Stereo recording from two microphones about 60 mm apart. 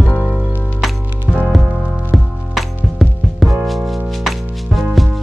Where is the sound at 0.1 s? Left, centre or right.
Left.